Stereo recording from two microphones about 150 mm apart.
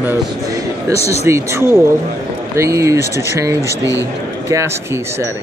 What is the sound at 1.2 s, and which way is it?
Speech, 20° right (ahead or behind).